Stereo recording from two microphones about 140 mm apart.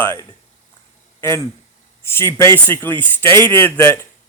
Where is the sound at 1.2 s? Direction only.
20° left (ahead or behind).